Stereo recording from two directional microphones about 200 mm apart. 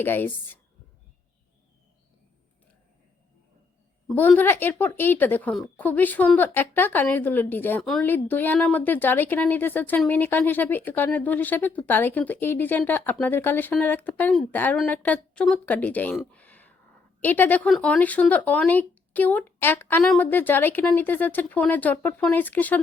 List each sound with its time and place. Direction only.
0.0 s speech: 10° left (ahead or behind)
4.0 s speech: 5° left (ahead or behind)